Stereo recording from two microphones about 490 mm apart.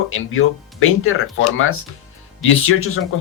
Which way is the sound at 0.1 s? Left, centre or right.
Left.